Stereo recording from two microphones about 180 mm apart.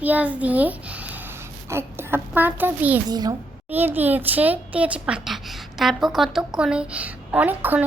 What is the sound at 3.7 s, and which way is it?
A woman's voice, 10° right (ahead or behind).